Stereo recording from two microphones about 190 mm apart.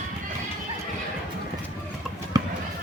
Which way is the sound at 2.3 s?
20° right (ahead or behind).